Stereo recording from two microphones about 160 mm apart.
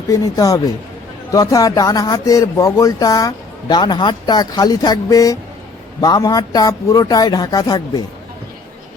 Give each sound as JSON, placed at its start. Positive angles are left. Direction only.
{"t": 0.1, "sound": "speech", "side_deg": 20}